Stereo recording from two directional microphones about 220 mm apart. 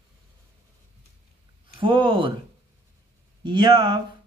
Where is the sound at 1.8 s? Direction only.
20° right (ahead or behind).